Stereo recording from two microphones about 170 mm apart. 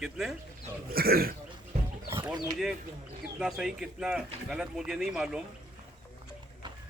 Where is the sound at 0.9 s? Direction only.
60° right (ahead or behind).